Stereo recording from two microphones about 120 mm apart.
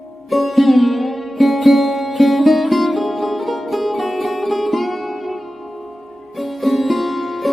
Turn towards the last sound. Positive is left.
turn(degrees=0)  # may be behind; listen again after turning